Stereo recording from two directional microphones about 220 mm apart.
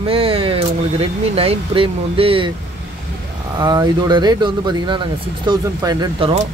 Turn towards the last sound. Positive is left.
turn(degrees=-20)  # may be behind; listen again after turning